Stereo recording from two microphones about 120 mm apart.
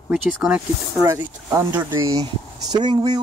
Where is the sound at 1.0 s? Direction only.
25° right (ahead or behind).